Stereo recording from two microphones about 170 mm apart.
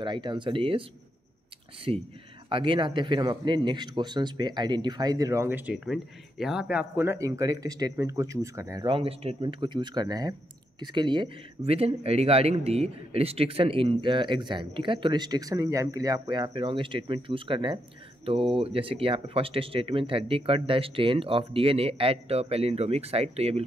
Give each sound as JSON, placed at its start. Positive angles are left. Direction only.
{"t": 0.0, "sound": "speech", "side_deg": -25}
{"t": 1.9, "sound": "speech", "side_deg": -35}
{"t": 8.8, "sound": "speech", "side_deg": -35}